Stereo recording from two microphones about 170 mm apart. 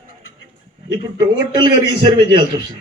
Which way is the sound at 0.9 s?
25° right (ahead or behind).